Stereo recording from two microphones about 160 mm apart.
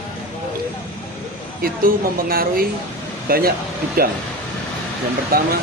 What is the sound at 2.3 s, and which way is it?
Speech, 70° right (ahead or behind).